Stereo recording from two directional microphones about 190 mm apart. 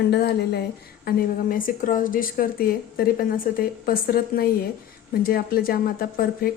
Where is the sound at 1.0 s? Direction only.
45° left (ahead or behind).